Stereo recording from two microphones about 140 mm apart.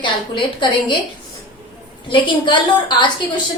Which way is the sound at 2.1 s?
35° left (ahead or behind).